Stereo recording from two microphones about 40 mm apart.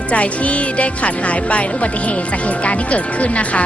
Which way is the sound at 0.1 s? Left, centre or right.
Left.